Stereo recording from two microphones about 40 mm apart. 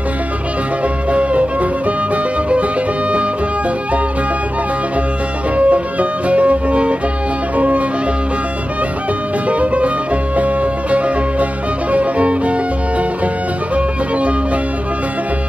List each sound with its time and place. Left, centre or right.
1.1 s music: right
5.6 s music: right
9.5 s music: right
13.7 s music: right